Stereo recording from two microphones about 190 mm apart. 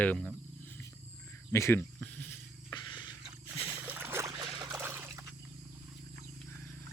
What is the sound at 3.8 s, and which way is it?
Boat, 10° right (ahead or behind).